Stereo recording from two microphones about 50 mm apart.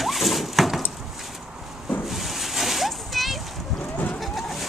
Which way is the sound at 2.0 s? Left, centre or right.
Centre.